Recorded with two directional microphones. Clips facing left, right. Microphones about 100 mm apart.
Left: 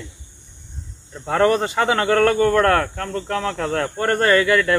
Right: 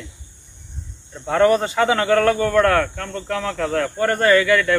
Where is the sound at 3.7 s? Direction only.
40° left (ahead or behind).